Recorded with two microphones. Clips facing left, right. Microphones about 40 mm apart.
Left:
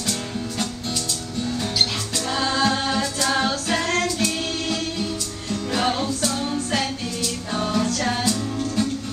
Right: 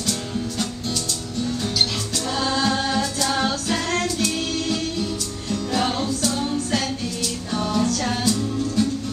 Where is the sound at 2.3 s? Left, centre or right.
Centre.